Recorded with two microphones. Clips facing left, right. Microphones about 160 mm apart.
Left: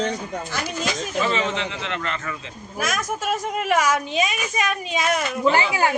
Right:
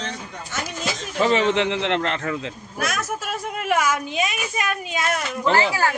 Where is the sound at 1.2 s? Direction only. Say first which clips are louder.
Right 8 dB; 65° right (ahead or behind).